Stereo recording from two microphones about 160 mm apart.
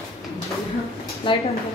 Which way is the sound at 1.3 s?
30° left (ahead or behind).